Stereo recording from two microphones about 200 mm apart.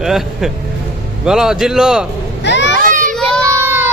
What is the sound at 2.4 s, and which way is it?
Children playing, 65° left (ahead or behind).